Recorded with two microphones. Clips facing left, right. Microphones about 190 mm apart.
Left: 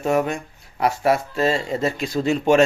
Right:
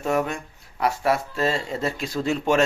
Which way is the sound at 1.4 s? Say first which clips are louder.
Left 4 dB; 10° left (ahead or behind).